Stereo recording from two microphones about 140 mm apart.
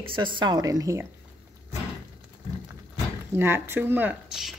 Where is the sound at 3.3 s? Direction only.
15° right (ahead or behind).